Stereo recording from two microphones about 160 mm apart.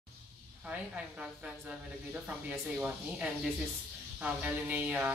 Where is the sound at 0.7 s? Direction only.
5° right (ahead or behind).